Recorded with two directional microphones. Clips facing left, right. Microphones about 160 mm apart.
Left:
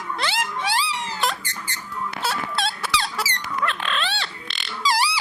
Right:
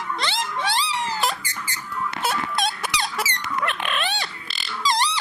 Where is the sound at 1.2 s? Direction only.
5° right (ahead or behind).